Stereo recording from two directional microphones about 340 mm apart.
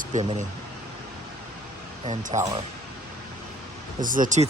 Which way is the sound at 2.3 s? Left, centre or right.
Centre.